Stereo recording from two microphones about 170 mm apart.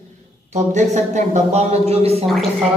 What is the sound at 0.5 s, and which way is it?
Speech, 45° right (ahead or behind).